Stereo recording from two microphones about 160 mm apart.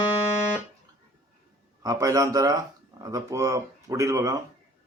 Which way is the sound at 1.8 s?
20° right (ahead or behind).